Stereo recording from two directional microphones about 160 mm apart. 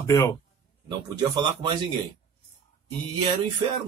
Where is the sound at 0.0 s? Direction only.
20° left (ahead or behind).